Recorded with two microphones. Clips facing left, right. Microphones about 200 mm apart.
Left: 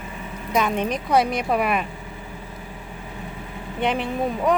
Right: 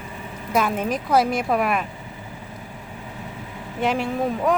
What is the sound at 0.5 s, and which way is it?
A woman's voice, 5° right (ahead or behind).